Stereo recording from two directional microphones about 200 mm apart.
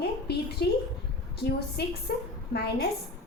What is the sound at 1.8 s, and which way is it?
Speech, 55° left (ahead or behind).